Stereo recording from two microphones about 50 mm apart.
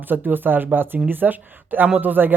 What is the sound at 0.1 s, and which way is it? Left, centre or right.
Speech, right.